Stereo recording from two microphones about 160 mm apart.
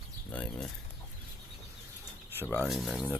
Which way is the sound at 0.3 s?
10° left (ahead or behind).